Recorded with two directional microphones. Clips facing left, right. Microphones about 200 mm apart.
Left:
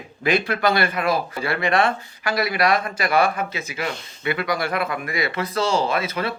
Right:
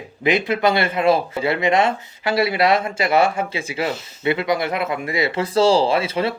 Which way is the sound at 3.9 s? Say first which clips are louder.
Right 2 dB; 5° right (ahead or behind).